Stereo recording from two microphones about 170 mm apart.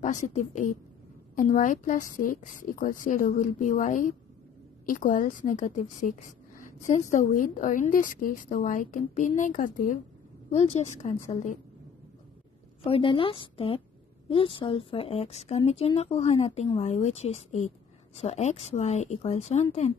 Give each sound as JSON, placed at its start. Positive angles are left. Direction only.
{"t": 0.0, "sound": "a woman's voice", "side_deg": 45}
{"t": 12.8, "sound": "a woman's voice", "side_deg": 30}